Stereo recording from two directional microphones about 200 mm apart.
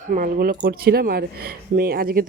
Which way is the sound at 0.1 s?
45° right (ahead or behind).